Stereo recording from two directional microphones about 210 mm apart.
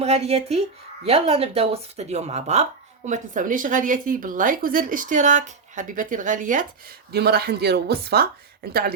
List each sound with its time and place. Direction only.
0.0 s speech: 30° right (ahead or behind); by 9.0 s 45° right (ahead or behind)